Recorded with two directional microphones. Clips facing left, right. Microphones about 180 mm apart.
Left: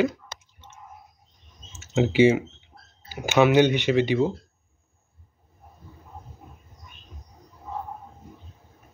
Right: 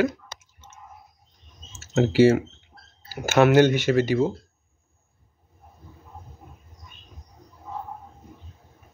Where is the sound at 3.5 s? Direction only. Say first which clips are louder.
Right 2 dB; 45° right (ahead or behind).